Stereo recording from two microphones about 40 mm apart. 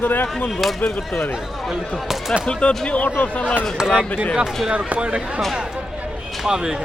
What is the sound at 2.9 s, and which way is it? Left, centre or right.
Speech, left.